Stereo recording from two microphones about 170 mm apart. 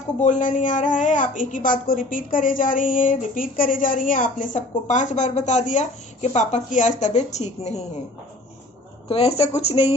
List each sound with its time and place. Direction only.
0.2 s a woman's voice: 50° left (ahead or behind)
9.0 s speech: 35° left (ahead or behind)